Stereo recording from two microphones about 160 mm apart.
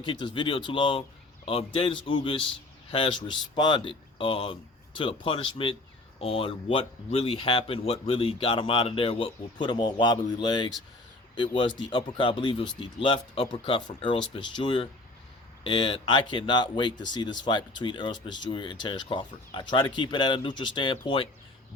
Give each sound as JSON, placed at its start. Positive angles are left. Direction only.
{"t": 0.0, "sound": "speech", "side_deg": 30}